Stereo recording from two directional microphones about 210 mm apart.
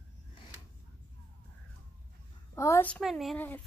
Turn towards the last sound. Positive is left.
turn(degrees=5)  # may be behind; listen again after turning